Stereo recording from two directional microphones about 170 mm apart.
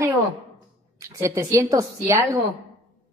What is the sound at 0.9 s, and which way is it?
A woman's voice, 20° right (ahead or behind).